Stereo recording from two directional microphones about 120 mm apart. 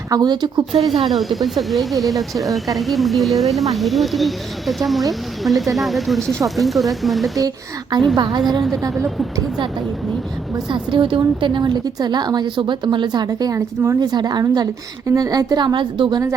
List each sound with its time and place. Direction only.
0.1 s a woman's voice: 35° right (ahead or behind)
1.0 s speech: centre (ahead or behind)
7.3 s a woman's voice: 35° right (ahead or behind)
10.7 s a woman's voice: 45° right (ahead or behind)